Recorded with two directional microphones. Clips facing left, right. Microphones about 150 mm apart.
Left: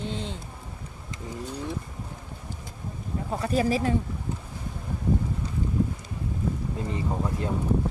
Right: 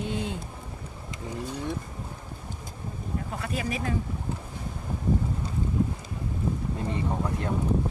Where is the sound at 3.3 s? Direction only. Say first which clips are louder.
Left 9 dB; 35° left (ahead or behind).